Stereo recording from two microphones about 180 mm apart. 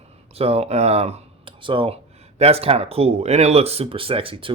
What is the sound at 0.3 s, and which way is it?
Speech, 35° right (ahead or behind).